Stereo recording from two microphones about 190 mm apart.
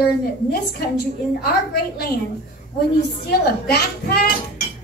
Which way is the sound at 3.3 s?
55° left (ahead or behind).